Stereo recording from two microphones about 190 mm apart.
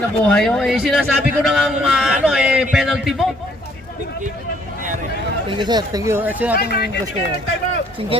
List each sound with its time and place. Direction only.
0.3 s a man's voice: 5° left (ahead or behind)
5.5 s speech: 25° right (ahead or behind); by 6.6 s 10° right (ahead or behind)
6.6 s speech: 55° left (ahead or behind)
8.1 s speech: 30° right (ahead or behind)